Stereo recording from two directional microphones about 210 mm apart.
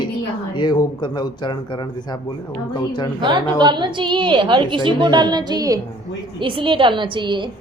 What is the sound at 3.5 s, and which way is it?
A woman's voice, 20° right (ahead or behind).